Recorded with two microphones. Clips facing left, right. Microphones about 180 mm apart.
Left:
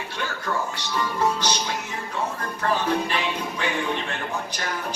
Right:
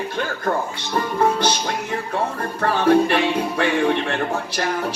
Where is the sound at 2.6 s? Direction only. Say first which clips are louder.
Right 8 dB; 65° right (ahead or behind).